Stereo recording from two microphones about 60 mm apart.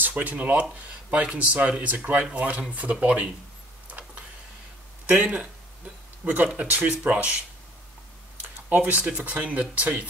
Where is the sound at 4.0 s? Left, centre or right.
Right.